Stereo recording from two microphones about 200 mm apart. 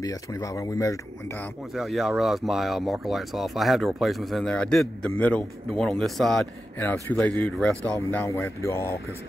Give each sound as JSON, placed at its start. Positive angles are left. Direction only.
{"t": 0.0, "sound": "speech", "side_deg": 15}
{"t": 1.7, "sound": "speech", "side_deg": 0}